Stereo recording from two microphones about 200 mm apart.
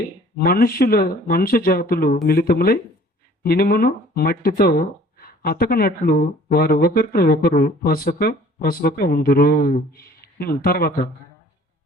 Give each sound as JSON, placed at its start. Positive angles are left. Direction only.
{"t": 0.3, "sound": "speech", "side_deg": 50}